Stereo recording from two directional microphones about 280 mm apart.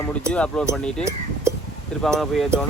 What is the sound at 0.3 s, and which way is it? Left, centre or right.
Speech, centre.